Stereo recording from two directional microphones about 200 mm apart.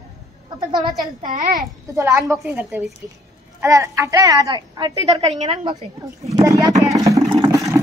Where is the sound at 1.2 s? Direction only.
40° right (ahead or behind).